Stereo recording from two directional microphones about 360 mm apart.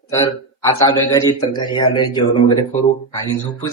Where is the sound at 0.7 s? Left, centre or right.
Centre.